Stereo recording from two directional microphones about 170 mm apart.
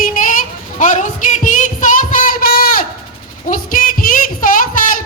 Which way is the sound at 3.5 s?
55° left (ahead or behind).